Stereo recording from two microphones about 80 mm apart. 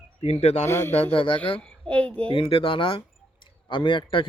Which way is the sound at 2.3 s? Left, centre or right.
Left.